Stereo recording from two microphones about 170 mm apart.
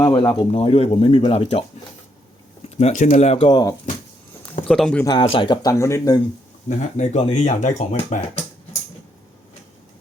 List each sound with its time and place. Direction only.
0.0 s speech: 25° left (ahead or behind)
2.6 s speech: 40° left (ahead or behind)
4.7 s speech: 5° left (ahead or behind)
5.0 s speech: 30° left (ahead or behind)
6.7 s speech: 45° left (ahead or behind)